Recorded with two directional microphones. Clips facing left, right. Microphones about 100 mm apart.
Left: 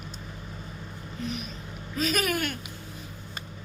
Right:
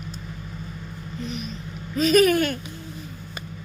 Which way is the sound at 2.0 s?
5° left (ahead or behind).